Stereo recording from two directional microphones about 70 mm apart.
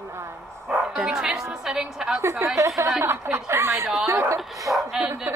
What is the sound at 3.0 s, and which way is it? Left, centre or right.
Speech, right.